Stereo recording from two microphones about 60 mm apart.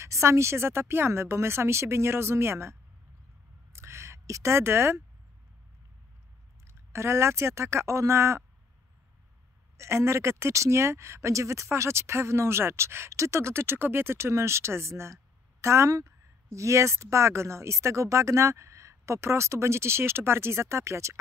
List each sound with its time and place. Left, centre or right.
0.0 s speech: right
3.7 s a sound: right
6.7 s speech: right
9.8 s speech: right